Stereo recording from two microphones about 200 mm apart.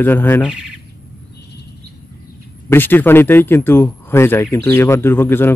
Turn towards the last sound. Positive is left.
turn(degrees=10)  # may be behind; listen again after turning